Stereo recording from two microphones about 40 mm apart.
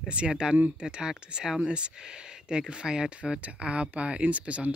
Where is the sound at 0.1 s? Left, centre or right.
Right.